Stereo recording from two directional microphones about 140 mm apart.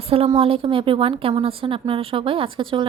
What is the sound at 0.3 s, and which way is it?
A woman's voice, 40° right (ahead or behind).